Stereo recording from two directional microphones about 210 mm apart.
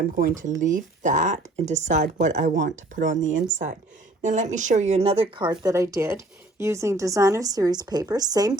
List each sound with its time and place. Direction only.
0.6 s speech: 35° right (ahead or behind); by 8.5 s 15° right (ahead or behind)